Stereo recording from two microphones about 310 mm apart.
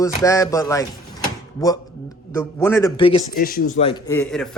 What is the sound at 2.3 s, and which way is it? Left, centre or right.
Speech, centre.